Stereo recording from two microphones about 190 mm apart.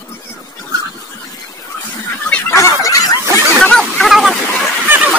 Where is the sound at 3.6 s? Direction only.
5° left (ahead or behind).